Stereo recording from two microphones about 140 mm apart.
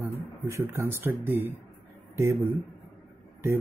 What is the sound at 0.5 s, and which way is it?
Speech, 20° right (ahead or behind).